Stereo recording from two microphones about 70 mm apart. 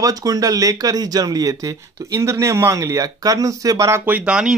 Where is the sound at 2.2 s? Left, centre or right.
Right.